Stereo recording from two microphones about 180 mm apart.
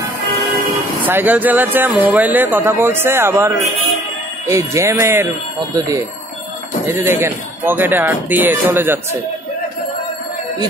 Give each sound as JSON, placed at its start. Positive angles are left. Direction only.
{"t": 1.0, "sound": "speech", "side_deg": -10}